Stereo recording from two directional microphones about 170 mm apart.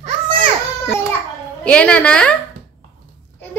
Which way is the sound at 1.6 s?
5° left (ahead or behind).